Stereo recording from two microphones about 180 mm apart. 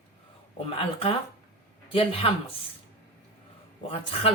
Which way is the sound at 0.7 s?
30° left (ahead or behind).